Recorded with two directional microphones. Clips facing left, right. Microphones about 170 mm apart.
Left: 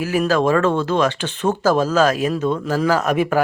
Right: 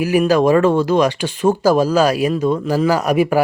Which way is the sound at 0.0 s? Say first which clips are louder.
Right 4 dB; 15° right (ahead or behind).